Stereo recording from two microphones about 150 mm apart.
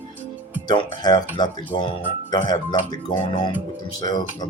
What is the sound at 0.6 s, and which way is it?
Speech, 30° left (ahead or behind).